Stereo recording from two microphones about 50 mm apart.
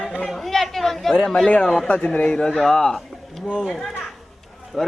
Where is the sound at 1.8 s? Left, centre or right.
Left.